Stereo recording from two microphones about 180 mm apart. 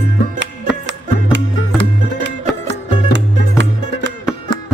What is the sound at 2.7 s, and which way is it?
Music, 85° right.